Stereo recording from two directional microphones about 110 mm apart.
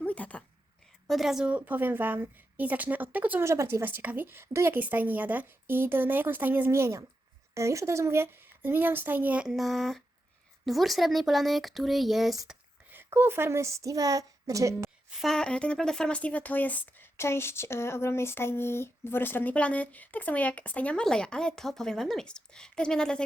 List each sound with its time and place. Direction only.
0.0 s a sound: 15° left (ahead or behind)
1.0 s a woman's voice: centre (ahead or behind)
12.9 s a woman's voice: 20° right (ahead or behind)
15.1 s speech: centre (ahead or behind)